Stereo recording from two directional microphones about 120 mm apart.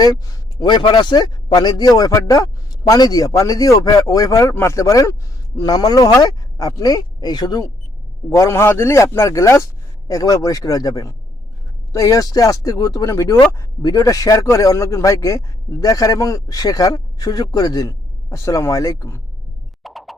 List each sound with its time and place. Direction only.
0.6 s speech: 40° left (ahead or behind); by 19.2 s 25° left (ahead or behind)
19.8 s music: centre (ahead or behind)